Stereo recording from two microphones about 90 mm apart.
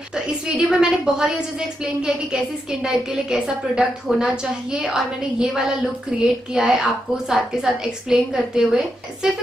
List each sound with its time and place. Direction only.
0.1 s a woman's voice: 10° right (ahead or behind)